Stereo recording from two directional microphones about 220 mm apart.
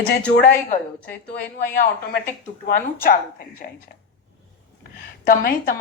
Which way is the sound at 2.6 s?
40° left (ahead or behind).